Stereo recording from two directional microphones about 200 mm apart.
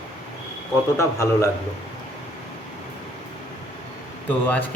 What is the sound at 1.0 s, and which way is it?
Speech, 15° left (ahead or behind).